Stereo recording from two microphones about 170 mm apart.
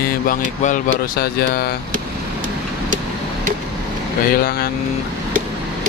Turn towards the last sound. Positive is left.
turn(degrees=60)  # may be behind; listen again after turning